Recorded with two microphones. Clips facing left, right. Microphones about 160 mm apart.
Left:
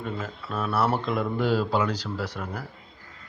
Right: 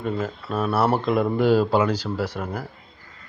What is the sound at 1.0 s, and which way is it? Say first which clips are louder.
Speech: right 6 dB; 60° right (ahead or behind).